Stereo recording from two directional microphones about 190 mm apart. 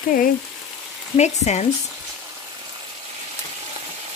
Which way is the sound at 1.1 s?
35° left (ahead or behind).